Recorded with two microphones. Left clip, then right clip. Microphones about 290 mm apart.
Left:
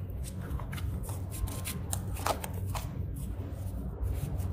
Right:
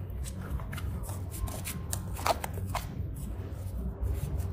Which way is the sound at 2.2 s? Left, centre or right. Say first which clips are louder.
Right 4 dB; centre.